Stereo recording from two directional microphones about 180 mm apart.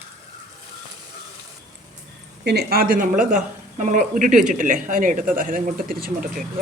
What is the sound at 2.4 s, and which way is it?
A woman's voice, 65° right (ahead or behind).